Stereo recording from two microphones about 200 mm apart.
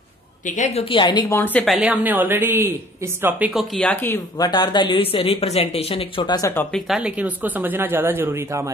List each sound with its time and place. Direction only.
0.5 s speech: 35° left (ahead or behind)
1.4 s a woman's voice: 5° left (ahead or behind)
1.8 s speech: 5° right (ahead or behind); by 4.5 s 10° left (ahead or behind)
4.5 s speech: 20° left (ahead or behind); by 7.0 s 5° left (ahead or behind)
7.0 s speech: 5° right (ahead or behind)